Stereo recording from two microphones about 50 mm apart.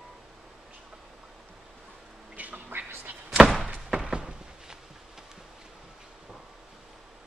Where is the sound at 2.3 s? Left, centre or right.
Right.